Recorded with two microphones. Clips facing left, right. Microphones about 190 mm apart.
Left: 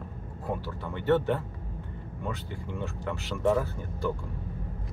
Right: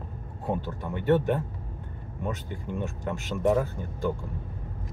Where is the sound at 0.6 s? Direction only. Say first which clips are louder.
Right 2 dB; 15° right (ahead or behind).